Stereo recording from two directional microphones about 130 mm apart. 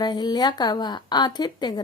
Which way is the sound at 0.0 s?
30° left (ahead or behind).